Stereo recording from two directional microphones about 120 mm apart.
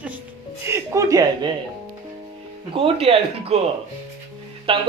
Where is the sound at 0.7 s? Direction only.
25° right (ahead or behind).